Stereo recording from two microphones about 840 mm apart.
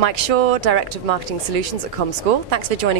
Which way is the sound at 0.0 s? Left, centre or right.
Right.